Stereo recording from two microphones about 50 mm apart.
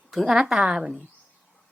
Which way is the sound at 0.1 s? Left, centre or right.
Centre.